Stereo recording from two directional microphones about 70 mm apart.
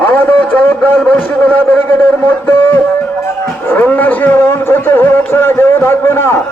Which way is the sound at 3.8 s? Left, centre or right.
Left.